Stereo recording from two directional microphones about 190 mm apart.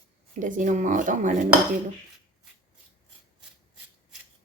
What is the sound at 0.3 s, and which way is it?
Speech, 40° right (ahead or behind).